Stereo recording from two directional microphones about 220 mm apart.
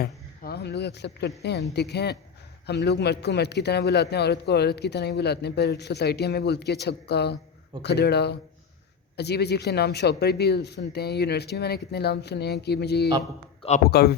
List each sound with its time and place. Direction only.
0.0 s a man's voice: 45° left (ahead or behind)
13.6 s a man's voice: 30° left (ahead or behind)
13.8 s a man's voice: 45° left (ahead or behind)